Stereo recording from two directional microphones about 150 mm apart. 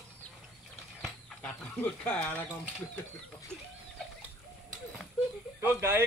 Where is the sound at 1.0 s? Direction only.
5° left (ahead or behind).